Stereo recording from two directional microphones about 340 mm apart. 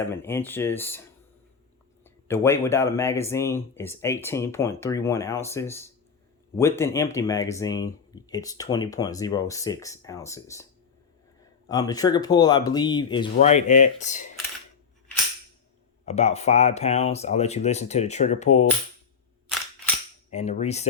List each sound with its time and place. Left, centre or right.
0.1 s speech: centre
2.0 s speech: centre
11.7 s speech: centre
16.0 s speech: centre
20.3 s speech: centre